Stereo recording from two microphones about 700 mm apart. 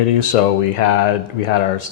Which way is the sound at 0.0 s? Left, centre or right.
Left.